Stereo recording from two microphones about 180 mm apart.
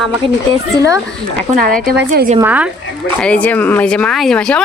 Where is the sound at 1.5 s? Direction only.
50° right (ahead or behind).